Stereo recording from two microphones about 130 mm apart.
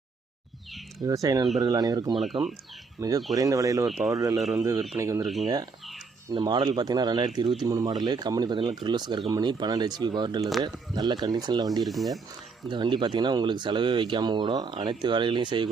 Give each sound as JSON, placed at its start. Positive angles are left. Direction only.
{"t": 1.0, "sound": "speech", "side_deg": -25}
{"t": 2.4, "sound": "speech", "side_deg": -40}
{"t": 3.0, "sound": "speech", "side_deg": -20}
{"t": 3.8, "sound": "speech", "side_deg": 0}
{"t": 4.1, "sound": "speech", "side_deg": -25}
{"t": 4.4, "sound": "speech", "side_deg": 0}
{"t": 4.9, "sound": "speech", "side_deg": -20}
{"t": 5.2, "sound": "speech", "side_deg": 0}
{"t": 6.3, "sound": "speech", "side_deg": -35}
{"t": 7.4, "sound": "speech", "side_deg": 0}
{"t": 7.7, "sound": "speech", "side_deg": -30}
{"t": 11.8, "sound": "speech", "side_deg": 0}
{"t": 12.7, "sound": "speech", "side_deg": -35}